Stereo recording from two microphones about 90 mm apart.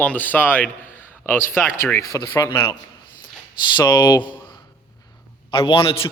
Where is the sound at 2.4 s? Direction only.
35° left (ahead or behind).